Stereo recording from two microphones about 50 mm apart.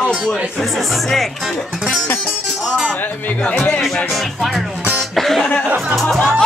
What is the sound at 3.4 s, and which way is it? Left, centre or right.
Speech, left.